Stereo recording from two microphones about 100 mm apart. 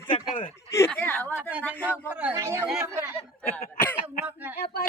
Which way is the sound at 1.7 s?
20° left (ahead or behind).